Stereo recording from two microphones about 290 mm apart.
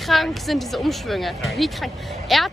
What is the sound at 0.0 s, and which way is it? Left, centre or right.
Speech, centre.